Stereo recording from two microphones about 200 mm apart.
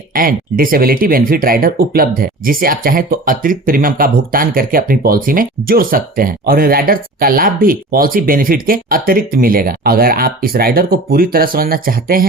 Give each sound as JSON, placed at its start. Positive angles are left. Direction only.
{"t": 0.1, "sound": "speech", "side_deg": -45}